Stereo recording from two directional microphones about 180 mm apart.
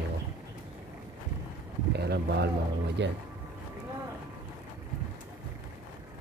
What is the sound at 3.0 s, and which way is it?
Speech, 80° right.